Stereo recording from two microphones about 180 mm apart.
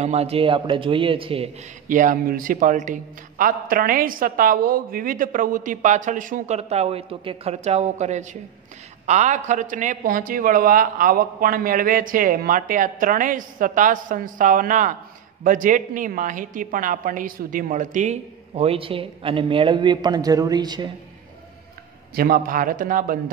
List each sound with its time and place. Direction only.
0.0 s a woman's voice: 35° right (ahead or behind)
1.9 s a man's voice: 45° right (ahead or behind); by 20.9 s 25° right (ahead or behind)
22.1 s a man's voice: 55° right (ahead or behind)